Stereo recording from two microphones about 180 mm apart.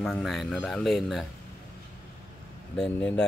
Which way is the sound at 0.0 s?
Centre (ahead or behind).